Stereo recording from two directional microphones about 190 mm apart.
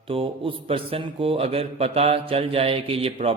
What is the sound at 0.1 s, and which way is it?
Speech, 30° right (ahead or behind).